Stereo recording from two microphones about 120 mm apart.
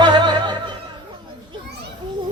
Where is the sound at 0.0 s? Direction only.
40° right (ahead or behind).